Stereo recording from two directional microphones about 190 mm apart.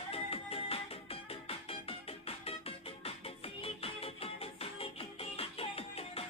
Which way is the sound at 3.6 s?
30° left (ahead or behind).